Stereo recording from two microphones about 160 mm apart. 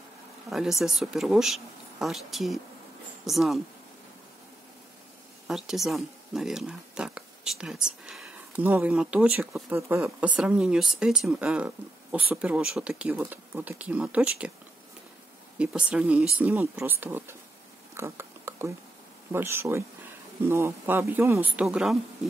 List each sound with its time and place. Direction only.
0.5 s speech: centre (ahead or behind)
5.5 s speech: centre (ahead or behind)
15.5 s speech: 5° right (ahead or behind)
17.9 s a sound: 15° right (ahead or behind)
19.3 s speech: 15° right (ahead or behind)